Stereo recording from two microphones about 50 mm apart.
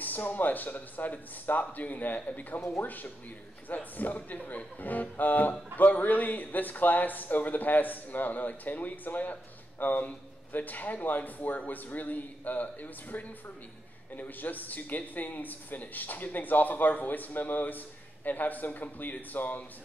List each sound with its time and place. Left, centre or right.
0.0 s speech: left
2.6 s speech: left
3.6 s speech: left